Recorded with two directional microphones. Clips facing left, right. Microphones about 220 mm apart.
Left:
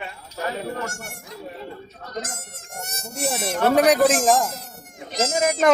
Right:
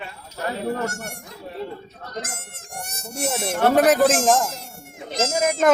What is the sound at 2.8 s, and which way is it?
Insect, 15° right (ahead or behind).